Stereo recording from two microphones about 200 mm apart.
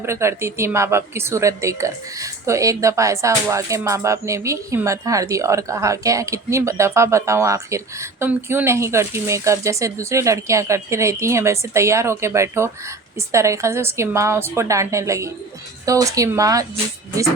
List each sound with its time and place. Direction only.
0.0 s speech: 15° right (ahead or behind)